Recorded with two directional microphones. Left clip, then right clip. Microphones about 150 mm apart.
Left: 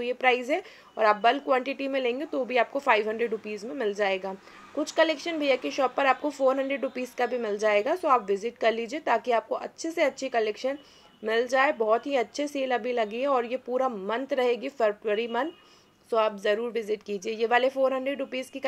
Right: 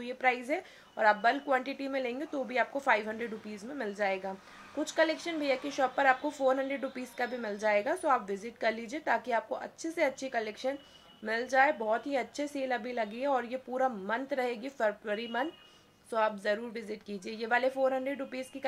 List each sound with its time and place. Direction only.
0.0 s a woman's voice: 15° left (ahead or behind)